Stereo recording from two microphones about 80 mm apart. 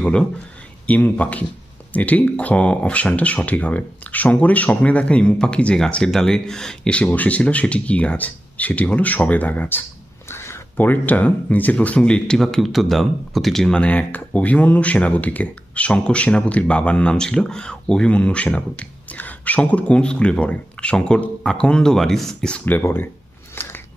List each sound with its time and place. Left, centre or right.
0.8 s speech: centre
22.7 s speech: left
23.5 s biting: left